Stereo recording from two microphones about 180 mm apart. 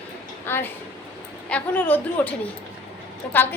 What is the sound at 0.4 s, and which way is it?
A woman's voice, 10° left (ahead or behind).